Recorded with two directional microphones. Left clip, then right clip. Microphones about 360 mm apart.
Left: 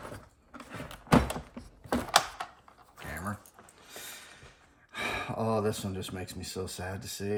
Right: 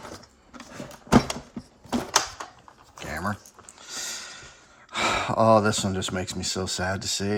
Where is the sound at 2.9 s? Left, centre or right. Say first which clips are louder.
Right 8 dB; centre.